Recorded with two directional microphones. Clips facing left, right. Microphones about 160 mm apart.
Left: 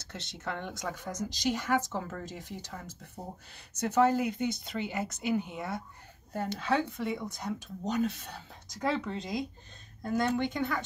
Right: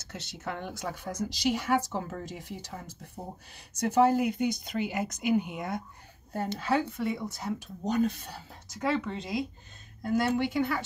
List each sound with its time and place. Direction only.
0.1 s speech: 10° right (ahead or behind)